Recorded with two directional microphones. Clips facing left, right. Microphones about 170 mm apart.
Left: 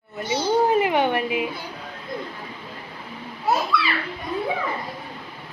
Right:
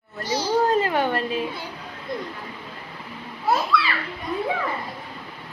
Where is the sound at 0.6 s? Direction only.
15° left (ahead or behind).